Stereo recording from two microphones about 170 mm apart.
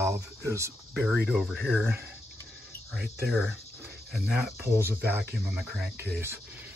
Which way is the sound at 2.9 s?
5° right (ahead or behind).